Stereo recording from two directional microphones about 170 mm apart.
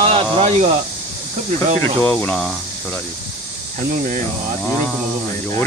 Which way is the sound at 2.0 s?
5° left (ahead or behind).